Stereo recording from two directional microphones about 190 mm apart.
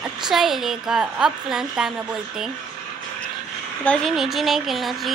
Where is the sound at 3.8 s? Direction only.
5° left (ahead or behind).